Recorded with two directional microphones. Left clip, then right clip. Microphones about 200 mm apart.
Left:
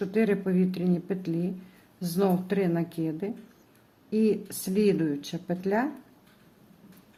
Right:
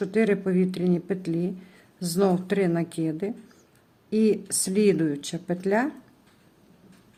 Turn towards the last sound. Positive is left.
turn(degrees=-15)  # may be behind; listen again after turning